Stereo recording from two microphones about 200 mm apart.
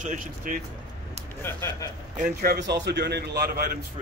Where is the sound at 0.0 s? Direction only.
40° right (ahead or behind).